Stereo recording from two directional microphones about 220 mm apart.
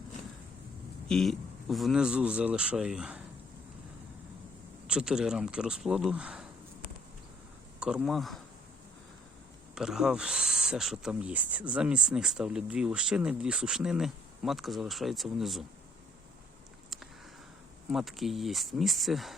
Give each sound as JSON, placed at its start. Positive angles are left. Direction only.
{"t": 1.0, "sound": "speech", "side_deg": 0}
{"t": 4.9, "sound": "speech", "side_deg": -5}
{"t": 7.8, "sound": "speech", "side_deg": -5}
{"t": 9.7, "sound": "speech", "side_deg": -5}
{"t": 17.9, "sound": "speech", "side_deg": 0}